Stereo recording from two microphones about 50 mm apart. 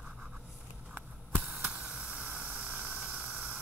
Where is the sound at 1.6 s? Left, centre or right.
Centre.